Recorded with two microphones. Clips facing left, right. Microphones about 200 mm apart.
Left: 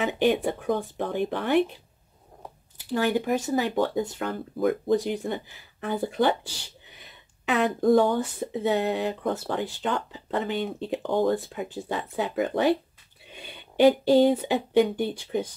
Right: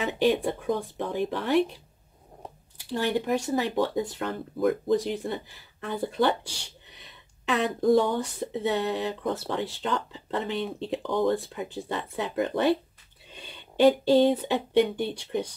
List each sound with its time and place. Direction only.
0.2 s speech: centre (ahead or behind)
2.9 s speech: centre (ahead or behind)
13.8 s speech: centre (ahead or behind)